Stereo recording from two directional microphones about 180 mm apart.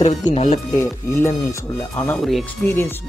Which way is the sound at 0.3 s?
35° left (ahead or behind).